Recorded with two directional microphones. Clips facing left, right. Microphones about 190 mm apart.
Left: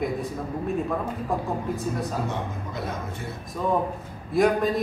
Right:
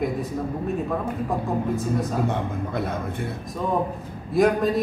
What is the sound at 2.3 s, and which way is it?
Speech, 55° right (ahead or behind).